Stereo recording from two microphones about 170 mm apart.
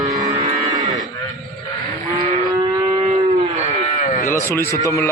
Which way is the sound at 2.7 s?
25° right (ahead or behind).